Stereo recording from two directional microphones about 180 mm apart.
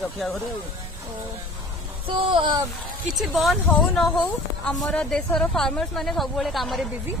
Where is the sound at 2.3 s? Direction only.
25° right (ahead or behind).